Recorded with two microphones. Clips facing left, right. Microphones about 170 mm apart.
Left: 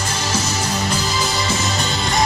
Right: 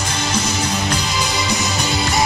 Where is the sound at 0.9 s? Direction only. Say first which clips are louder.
Even; 5° left (ahead or behind).